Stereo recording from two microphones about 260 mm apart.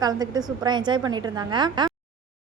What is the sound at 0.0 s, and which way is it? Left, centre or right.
Speech, centre.